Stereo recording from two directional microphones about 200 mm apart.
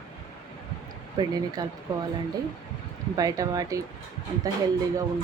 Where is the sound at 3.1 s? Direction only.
20° right (ahead or behind).